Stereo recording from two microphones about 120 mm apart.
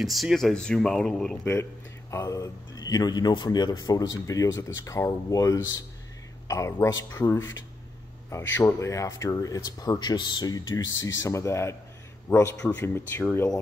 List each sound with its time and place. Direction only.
0.0 s speech: centre (ahead or behind)
1.4 s a man's voice: 20° left (ahead or behind)